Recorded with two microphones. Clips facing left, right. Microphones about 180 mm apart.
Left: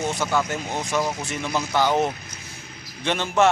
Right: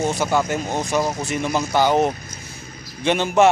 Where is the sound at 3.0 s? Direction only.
15° right (ahead or behind).